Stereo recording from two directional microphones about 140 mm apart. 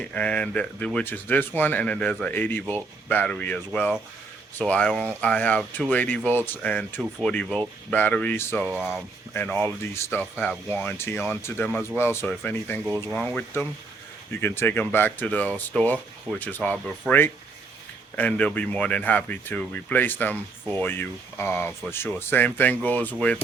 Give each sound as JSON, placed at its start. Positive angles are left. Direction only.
{"t": 0.0, "sound": "speech", "side_deg": 10}
{"t": 8.7, "sound": "speech", "side_deg": -5}
{"t": 9.3, "sound": "speech", "side_deg": 15}
{"t": 12.8, "sound": "speech", "side_deg": -5}
{"t": 13.1, "sound": "speech", "side_deg": 10}